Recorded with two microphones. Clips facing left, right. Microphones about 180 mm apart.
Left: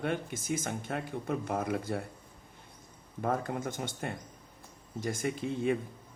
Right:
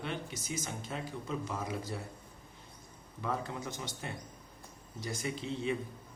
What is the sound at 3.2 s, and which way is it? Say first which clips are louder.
A man's voice: left 5 dB; 50° left (ahead or behind).